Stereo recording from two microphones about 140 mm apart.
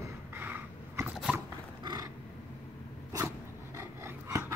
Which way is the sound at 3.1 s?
20° right (ahead or behind).